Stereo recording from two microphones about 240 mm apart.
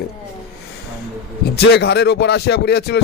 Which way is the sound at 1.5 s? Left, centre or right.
Left.